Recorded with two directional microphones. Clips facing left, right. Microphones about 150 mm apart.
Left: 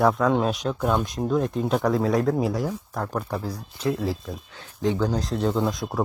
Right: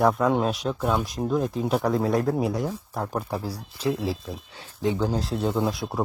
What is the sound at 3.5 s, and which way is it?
Speech, 30° right (ahead or behind).